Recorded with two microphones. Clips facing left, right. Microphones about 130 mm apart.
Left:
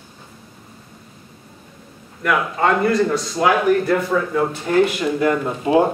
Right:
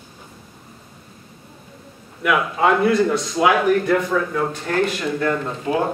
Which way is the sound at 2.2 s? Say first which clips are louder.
Even; 5° right (ahead or behind).